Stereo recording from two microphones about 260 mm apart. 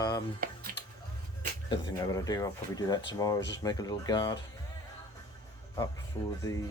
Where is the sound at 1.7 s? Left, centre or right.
Centre.